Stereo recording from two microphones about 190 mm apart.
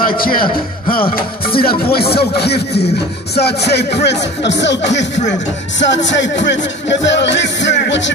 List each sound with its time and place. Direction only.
0.2 s speech: 50° left (ahead or behind); by 8.1 s 70° left (ahead or behind)